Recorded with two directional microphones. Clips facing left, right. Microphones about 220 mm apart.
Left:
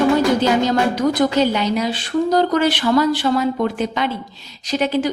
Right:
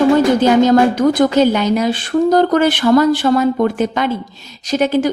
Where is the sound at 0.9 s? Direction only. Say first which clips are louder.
Right 4 dB; 50° right (ahead or behind).